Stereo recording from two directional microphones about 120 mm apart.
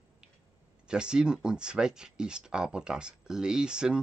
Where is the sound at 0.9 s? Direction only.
5° right (ahead or behind).